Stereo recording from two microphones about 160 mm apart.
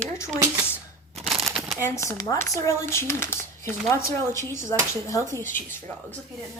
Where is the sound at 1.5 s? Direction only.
5° right (ahead or behind).